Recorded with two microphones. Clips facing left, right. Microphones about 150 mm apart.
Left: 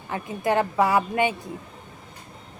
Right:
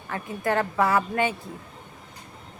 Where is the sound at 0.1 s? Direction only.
20° left (ahead or behind).